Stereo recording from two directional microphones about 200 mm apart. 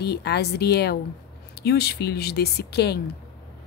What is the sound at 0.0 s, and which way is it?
A woman's voice, 55° left (ahead or behind).